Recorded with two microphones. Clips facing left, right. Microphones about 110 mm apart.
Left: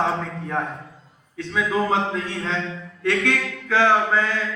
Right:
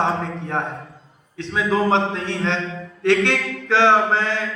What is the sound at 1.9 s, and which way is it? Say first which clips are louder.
Mantra: right 3 dB; 75° right (ahead or behind).